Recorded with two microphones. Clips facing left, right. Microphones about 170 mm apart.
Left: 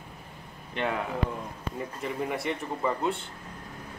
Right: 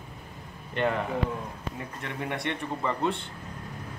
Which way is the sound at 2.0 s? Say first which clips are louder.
Left 2 dB; 5° left (ahead or behind).